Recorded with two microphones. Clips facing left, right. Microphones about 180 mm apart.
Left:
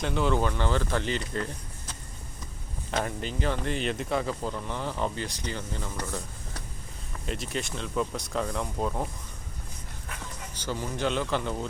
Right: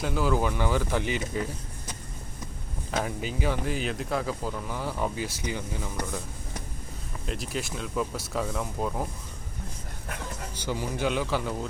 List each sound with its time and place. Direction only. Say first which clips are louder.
0.0 s speech: even; 5° right (ahead or behind)
2.9 s speech: even; 5° right (ahead or behind)
7.3 s speech: even; centre (ahead or behind)
10.7 s speech: right 1 dB; 10° right (ahead or behind)